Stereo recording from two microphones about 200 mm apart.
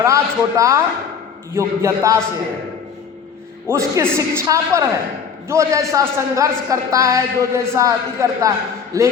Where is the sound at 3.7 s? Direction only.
15° right (ahead or behind).